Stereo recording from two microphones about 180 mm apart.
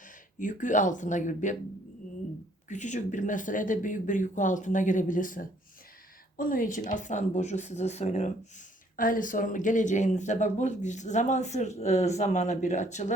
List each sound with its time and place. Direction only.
0.3 s speech: 45° left (ahead or behind)
2.6 s speech: 40° left (ahead or behind)